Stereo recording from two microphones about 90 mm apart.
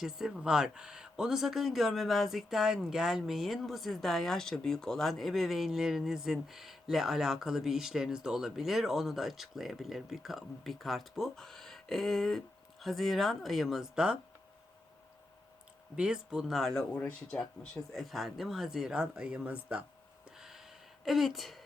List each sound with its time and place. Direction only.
0.0 s speech: 5° right (ahead or behind)
16.0 s speech: 10° right (ahead or behind)
20.3 s a sound: 5° right (ahead or behind)